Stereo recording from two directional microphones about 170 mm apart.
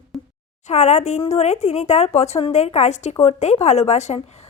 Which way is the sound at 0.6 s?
40° left (ahead or behind).